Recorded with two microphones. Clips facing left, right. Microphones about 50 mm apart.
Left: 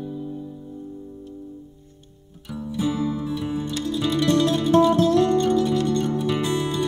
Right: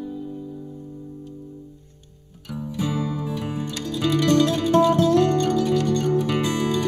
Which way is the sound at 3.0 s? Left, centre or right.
Right.